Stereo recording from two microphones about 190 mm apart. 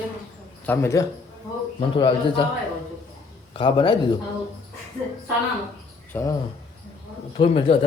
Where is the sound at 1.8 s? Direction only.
25° left (ahead or behind).